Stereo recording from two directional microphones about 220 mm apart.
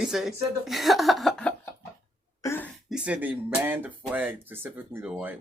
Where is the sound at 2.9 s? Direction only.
5° right (ahead or behind).